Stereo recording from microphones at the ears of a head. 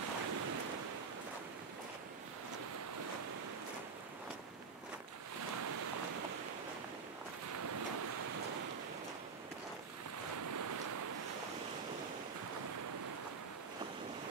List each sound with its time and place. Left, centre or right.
0.0 s waves: right
5.4 s waves: right
7.5 s waves: right
10.2 s waves: right